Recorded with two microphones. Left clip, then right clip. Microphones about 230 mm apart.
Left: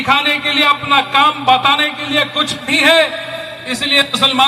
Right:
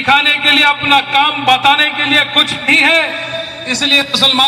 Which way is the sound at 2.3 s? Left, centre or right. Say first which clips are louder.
Right 5 dB; left.